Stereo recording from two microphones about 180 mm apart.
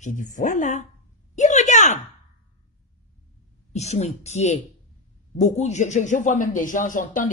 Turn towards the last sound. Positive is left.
turn(degrees=45)  # may be behind; listen again after turning